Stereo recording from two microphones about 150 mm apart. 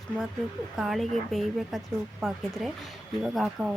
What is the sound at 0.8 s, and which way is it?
Speech, centre (ahead or behind).